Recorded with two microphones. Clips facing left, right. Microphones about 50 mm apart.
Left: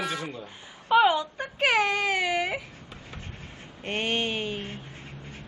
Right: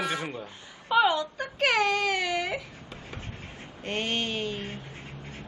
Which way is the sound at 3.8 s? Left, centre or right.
Left.